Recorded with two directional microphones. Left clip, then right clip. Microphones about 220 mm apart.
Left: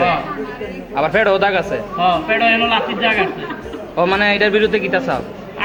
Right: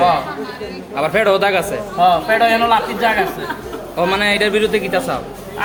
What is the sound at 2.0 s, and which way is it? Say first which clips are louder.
Speech: right 3 dB; 45° right (ahead or behind).